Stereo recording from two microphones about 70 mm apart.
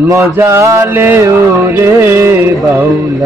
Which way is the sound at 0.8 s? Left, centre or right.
Right.